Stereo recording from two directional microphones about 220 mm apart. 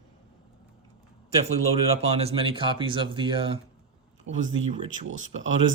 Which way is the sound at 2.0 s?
25° right (ahead or behind).